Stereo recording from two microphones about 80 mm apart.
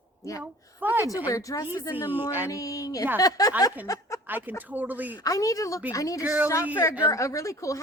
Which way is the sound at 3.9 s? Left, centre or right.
Left.